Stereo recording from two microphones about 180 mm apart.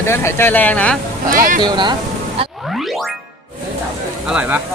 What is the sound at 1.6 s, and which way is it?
Speech, 25° right (ahead or behind).